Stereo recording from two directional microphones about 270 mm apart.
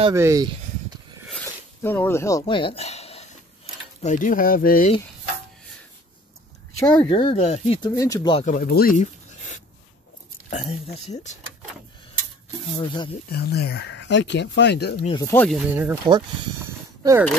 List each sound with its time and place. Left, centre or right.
0.0 s speech: centre
1.3 s a sound: centre; by 3.3 s left
4.0 s speech: left
6.8 s speech: centre
8.5 s speech: left
12.7 s speech: centre
13.3 s speech: left
15.0 s speech: centre
15.6 s speech: centre
16.6 s a sound: centre